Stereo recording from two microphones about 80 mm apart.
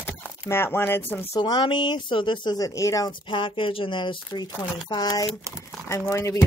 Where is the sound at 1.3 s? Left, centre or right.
Left.